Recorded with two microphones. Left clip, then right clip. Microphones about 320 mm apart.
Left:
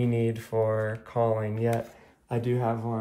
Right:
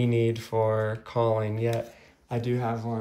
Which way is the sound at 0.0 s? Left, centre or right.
Centre.